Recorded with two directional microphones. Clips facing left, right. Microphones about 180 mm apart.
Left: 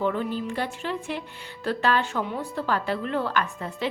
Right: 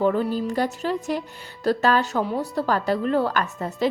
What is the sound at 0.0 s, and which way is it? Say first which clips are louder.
A woman's voice: right 5 dB; 40° right (ahead or behind).